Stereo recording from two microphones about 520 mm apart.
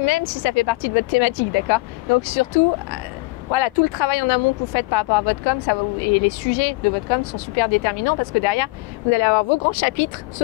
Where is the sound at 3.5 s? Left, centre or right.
Left.